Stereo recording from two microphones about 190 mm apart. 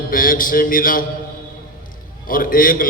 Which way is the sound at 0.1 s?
45° left (ahead or behind).